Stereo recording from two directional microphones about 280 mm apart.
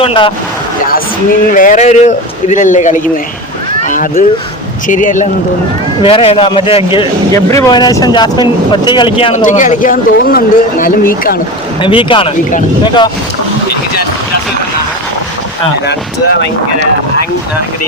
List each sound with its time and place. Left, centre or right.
0.0 s a man's voice: centre
1.5 s a man's voice: left
11.8 s a man's voice: centre